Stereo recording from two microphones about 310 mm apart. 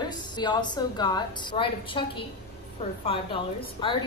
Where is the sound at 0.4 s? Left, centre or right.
Centre.